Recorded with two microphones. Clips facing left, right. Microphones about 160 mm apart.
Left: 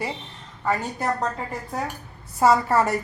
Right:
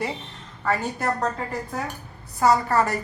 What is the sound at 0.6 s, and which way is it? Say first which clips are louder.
Speech: even; 15° left (ahead or behind).